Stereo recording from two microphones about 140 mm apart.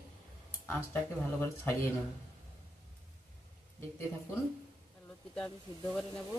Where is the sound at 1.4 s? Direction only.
20° left (ahead or behind).